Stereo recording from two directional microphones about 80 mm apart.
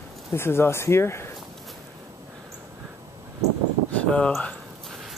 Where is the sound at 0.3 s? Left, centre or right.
Left.